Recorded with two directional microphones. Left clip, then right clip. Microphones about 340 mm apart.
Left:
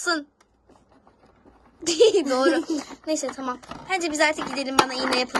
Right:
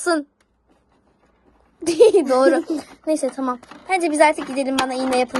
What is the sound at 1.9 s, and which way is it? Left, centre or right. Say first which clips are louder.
Speech: right 5 dB; centre.